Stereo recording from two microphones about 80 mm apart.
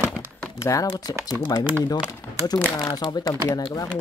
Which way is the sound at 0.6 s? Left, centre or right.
Left.